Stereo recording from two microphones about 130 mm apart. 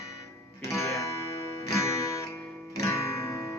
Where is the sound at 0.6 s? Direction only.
25° left (ahead or behind).